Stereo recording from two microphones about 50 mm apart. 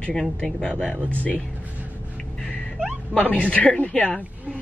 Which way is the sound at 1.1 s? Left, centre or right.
Left.